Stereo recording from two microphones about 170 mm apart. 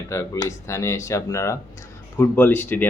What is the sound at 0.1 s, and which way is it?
Speech, 15° left (ahead or behind).